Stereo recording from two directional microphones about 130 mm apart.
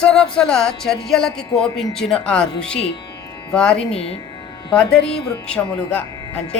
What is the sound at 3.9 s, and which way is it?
Speech, 50° left (ahead or behind).